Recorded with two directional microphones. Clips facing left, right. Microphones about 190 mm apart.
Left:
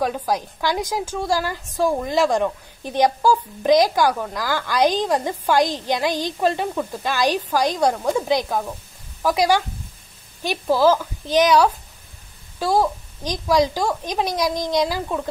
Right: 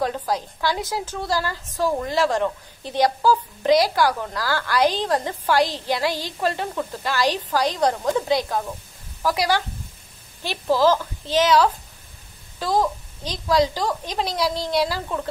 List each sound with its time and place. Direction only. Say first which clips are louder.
0.0 s a woman's voice: left 2 dB; 10° left (ahead or behind)